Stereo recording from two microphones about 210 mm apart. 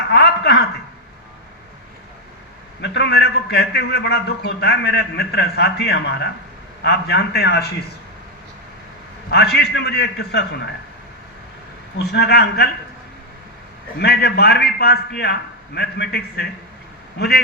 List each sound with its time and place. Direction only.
0.1 s a sound: 50° left (ahead or behind)
2.8 s a man's voice: 55° left (ahead or behind)
9.3 s a man's voice: 50° left (ahead or behind)
11.9 s a man's voice: 50° left (ahead or behind)
14.0 s a man's voice: 50° left (ahead or behind)